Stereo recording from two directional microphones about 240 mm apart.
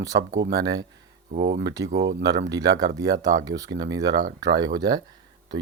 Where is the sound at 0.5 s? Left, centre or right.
Centre.